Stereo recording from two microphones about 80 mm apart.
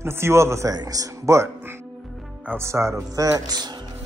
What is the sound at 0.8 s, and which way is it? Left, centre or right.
Speech, right.